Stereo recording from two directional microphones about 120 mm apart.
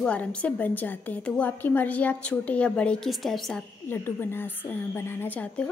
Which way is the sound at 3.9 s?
20° left (ahead or behind).